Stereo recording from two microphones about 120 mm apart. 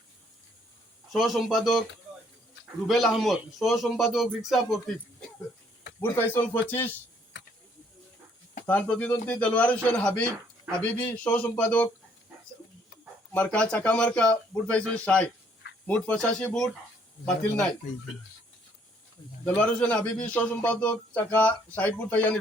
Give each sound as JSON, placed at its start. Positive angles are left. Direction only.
{"t": 1.1, "sound": "a man's voice", "side_deg": 0}
{"t": 2.8, "sound": "a man's voice", "side_deg": 0}
{"t": 6.0, "sound": "a man's voice", "side_deg": 15}
{"t": 8.6, "sound": "a man's voice", "side_deg": 10}
{"t": 13.3, "sound": "a man's voice", "side_deg": 10}
{"t": 19.5, "sound": "a man's voice", "side_deg": 10}